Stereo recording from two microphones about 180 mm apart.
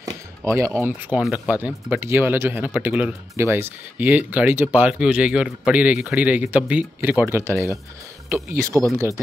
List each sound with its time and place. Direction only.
0.4 s speech: 15° right (ahead or behind)
8.9 s speech: 15° right (ahead or behind)